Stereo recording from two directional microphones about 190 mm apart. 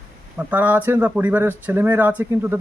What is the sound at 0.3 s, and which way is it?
Speech, 10° right (ahead or behind).